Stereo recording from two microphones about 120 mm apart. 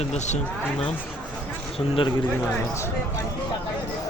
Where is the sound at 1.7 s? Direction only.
55° left (ahead or behind).